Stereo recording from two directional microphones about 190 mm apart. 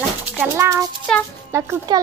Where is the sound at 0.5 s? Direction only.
15° right (ahead or behind).